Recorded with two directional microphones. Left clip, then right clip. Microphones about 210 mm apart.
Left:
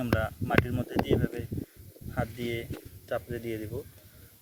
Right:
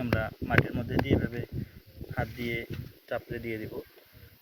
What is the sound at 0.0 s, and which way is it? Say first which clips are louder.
Speech: left 1 dB; 5° left (ahead or behind).